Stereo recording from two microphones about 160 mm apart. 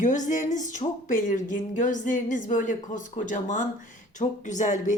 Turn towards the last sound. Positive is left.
turn(degrees=50)  # may be behind; listen again after turning